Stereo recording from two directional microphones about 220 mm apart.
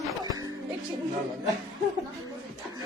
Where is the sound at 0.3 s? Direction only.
15° right (ahead or behind).